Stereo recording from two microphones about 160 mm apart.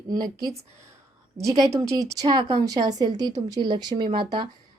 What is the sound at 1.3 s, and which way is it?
Speech, 20° right (ahead or behind).